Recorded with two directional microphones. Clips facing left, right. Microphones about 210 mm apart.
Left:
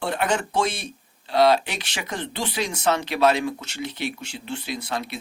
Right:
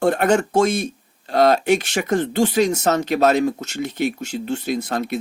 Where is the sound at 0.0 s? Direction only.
45° right (ahead or behind).